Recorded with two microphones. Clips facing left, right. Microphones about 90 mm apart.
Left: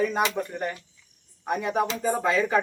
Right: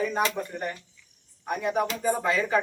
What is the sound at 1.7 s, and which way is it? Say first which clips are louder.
Speech: even; 20° left (ahead or behind).